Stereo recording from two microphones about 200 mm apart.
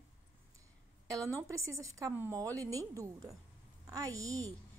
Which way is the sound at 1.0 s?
15° right (ahead or behind).